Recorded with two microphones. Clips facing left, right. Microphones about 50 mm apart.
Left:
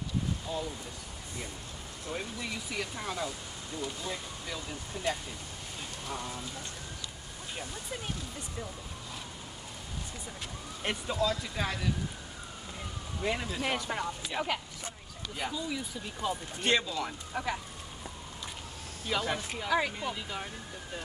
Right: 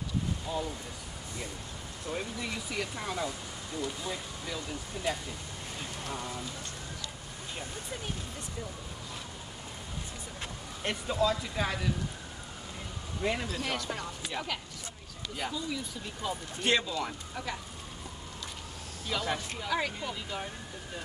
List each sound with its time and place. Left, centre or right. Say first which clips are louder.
0.5 s a sound: right 2 dB; centre
2.1 s speech: right 1 dB; centre
10.8 s speech: even; centre
11.1 s speech: right 4 dB; centre
13.2 s speech: right 1 dB; centre
13.6 s speech: left 2 dB; centre
17.3 s speech: left 4 dB; centre
19.2 s speech: left 1 dB; centre